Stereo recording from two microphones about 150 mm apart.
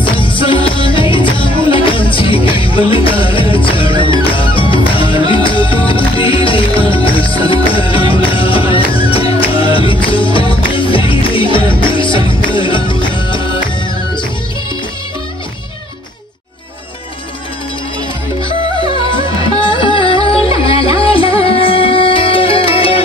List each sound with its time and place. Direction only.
0.0 s music: 35° left (ahead or behind)
19.6 s music: 35° left (ahead or behind)